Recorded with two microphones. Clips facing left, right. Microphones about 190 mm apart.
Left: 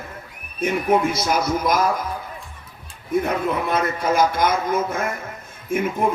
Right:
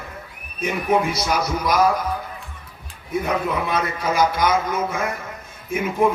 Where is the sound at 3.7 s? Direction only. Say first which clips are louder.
Left 2 dB; 50° left (ahead or behind).